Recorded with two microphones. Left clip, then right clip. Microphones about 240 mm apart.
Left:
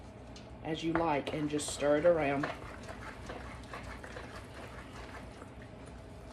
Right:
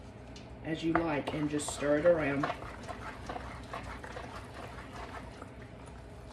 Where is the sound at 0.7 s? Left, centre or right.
Centre.